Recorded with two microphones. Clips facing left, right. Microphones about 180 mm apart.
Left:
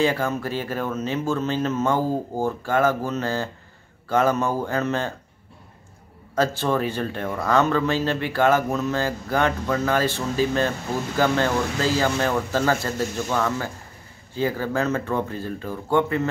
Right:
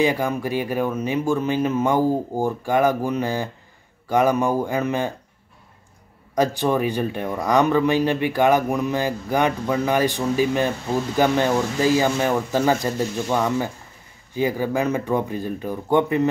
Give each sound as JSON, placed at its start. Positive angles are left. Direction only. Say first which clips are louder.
{"t": 0.0, "sound": "speech", "louder": "right 2 dB", "side_deg": -15}
{"t": 6.3, "sound": "speech", "louder": "right 2 dB", "side_deg": -15}